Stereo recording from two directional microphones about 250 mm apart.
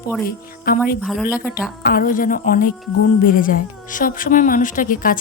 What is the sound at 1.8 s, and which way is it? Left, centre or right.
A woman's voice, left.